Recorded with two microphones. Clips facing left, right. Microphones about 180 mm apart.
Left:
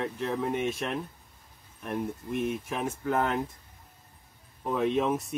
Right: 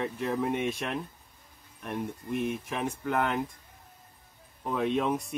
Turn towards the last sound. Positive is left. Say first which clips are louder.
# left 1 dB
turn(degrees=0)  # may be behind; listen again after turning